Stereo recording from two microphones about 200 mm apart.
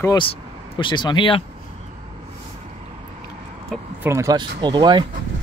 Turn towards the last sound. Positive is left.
turn(degrees=-20)  # may be behind; listen again after turning